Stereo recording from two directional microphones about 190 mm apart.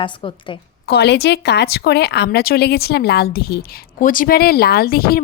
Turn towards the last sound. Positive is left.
turn(degrees=50)  # may be behind; listen again after turning